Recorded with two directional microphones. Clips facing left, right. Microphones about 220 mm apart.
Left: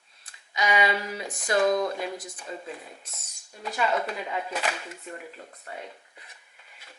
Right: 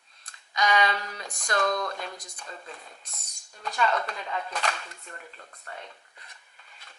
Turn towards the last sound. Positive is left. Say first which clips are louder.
# left 4 dB
turn(degrees=10)  # may be behind; listen again after turning